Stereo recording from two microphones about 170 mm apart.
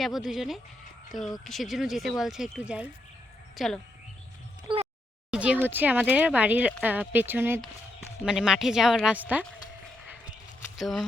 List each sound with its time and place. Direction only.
0.0 s a woman's voice: centre (ahead or behind)
4.7 s a sound: 30° right (ahead or behind)
5.3 s speech: 5° right (ahead or behind)
10.8 s speech: centre (ahead or behind)